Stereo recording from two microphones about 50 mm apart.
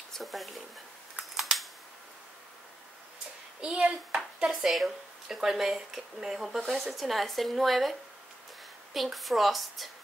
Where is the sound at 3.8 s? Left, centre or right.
Right.